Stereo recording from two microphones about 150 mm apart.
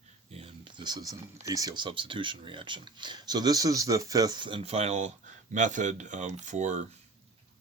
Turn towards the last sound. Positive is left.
turn(degrees=-50)  # may be behind; listen again after turning